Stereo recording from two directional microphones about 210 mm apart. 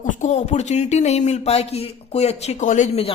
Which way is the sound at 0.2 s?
35° left (ahead or behind).